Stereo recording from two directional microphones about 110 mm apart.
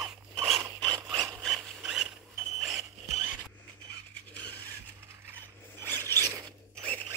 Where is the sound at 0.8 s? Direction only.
40° right (ahead or behind).